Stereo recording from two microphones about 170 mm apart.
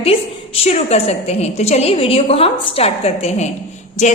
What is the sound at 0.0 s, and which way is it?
A woman's voice, 35° left (ahead or behind).